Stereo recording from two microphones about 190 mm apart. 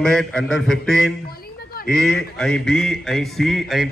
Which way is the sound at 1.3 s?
55° left (ahead or behind).